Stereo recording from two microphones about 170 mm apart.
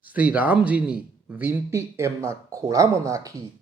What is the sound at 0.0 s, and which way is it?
Speech, 10° right (ahead or behind).